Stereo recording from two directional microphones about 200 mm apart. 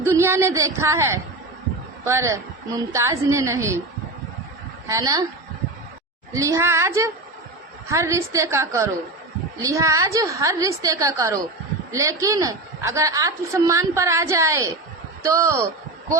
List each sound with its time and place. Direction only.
0.0 s a woman's voice: 15° right (ahead or behind)
4.9 s a woman's voice: 15° right (ahead or behind)
6.3 s a woman's voice: 15° right (ahead or behind)